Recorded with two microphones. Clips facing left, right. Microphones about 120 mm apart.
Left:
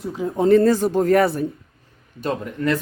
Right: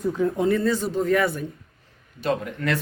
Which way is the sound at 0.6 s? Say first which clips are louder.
Left 5 dB; 45° left (ahead or behind).